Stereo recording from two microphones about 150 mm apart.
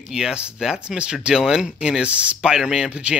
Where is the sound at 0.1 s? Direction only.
5° right (ahead or behind).